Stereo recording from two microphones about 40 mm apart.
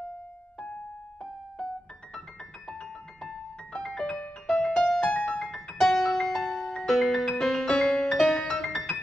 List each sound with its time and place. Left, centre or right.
2.7 s music: centre
5.9 s music: left
6.2 s music: centre